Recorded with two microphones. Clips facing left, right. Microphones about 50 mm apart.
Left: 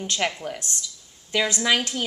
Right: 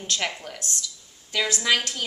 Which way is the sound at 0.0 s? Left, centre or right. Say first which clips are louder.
Left 3 dB; centre.